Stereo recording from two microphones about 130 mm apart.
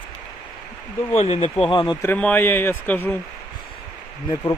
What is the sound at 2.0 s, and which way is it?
A man's voice, 10° left (ahead or behind).